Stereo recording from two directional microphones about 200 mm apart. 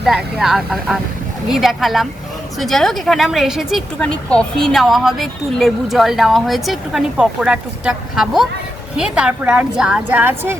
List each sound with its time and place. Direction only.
0.0 s speech: centre (ahead or behind)